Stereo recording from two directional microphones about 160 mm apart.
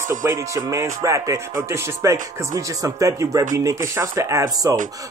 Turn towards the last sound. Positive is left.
turn(degrees=-20)  # may be behind; listen again after turning